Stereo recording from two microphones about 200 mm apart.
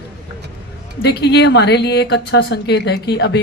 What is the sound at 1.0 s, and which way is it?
A woman's voice, 60° left (ahead or behind).